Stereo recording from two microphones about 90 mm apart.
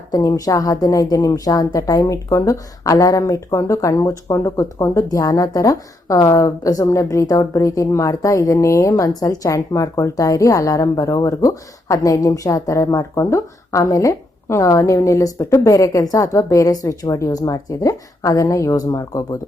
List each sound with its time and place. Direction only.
0.1 s a woman's voice: 40° left (ahead or behind)